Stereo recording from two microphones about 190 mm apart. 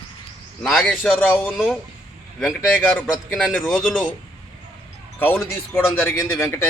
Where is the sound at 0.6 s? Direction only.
Centre (ahead or behind).